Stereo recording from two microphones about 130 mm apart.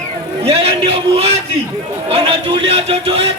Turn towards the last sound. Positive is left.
turn(degrees=-45)  # may be behind; listen again after turning